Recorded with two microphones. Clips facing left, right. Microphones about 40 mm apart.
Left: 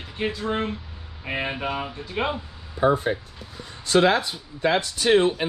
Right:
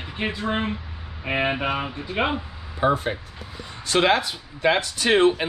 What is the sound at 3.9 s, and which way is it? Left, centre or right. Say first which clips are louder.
Speech: left 1 dB; right.